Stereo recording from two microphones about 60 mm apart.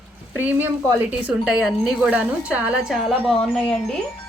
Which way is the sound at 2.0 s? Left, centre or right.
Centre.